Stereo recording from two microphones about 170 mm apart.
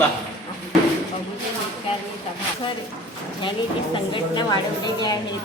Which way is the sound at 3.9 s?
30° left (ahead or behind).